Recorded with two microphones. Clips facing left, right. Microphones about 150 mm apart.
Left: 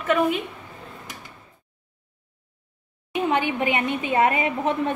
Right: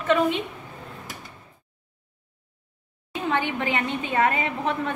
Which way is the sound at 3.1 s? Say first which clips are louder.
Left 3 dB; 20° left (ahead or behind).